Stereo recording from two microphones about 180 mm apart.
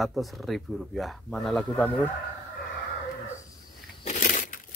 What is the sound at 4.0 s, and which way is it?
Crushing, 45° left (ahead or behind).